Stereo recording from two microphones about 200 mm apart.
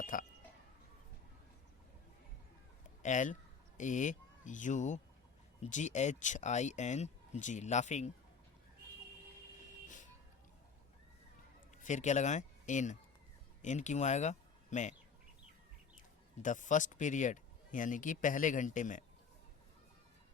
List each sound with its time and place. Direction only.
0.0 s chink: 40° left (ahead or behind)
3.0 s speech: 40° left (ahead or behind)
11.8 s speech: 35° left (ahead or behind)
16.4 s speech: 40° left (ahead or behind)